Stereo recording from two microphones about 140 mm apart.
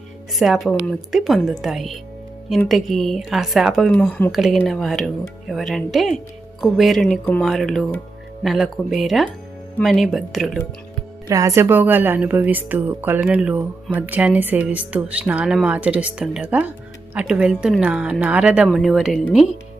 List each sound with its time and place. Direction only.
0.3 s speech: centre (ahead or behind)
11.3 s a woman's voice: 25° right (ahead or behind); by 19.2 s centre (ahead or behind)